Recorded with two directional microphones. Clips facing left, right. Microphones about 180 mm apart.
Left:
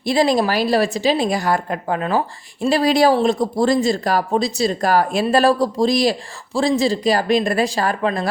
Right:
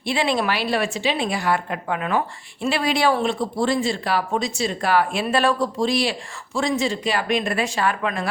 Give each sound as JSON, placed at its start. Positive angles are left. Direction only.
{"t": 0.0, "sound": "a woman's voice", "side_deg": 40}